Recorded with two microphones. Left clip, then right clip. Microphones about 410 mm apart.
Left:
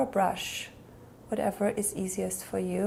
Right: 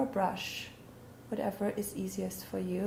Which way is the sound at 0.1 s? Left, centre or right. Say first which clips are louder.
Left 5 dB; left.